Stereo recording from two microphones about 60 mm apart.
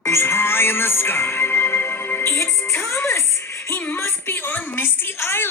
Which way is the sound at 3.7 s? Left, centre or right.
Left.